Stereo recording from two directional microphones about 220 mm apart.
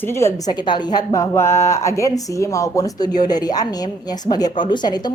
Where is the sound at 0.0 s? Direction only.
10° left (ahead or behind).